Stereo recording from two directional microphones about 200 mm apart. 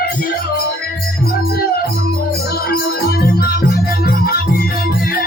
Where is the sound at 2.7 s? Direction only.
50° left (ahead or behind).